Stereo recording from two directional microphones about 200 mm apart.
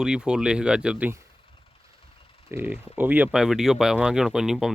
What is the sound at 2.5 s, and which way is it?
Speech, 10° right (ahead or behind).